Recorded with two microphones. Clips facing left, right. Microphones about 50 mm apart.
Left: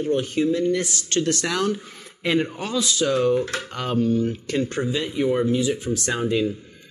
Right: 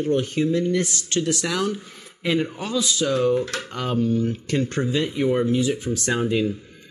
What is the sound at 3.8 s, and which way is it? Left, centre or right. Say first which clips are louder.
Speech: left 1 dB; left.